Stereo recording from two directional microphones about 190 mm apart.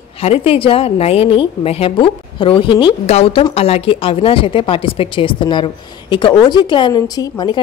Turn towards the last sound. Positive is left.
turn(degrees=20)  # may be behind; listen again after turning